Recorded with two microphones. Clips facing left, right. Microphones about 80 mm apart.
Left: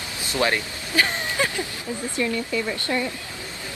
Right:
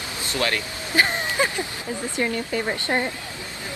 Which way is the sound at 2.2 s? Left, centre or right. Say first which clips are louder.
Even; right.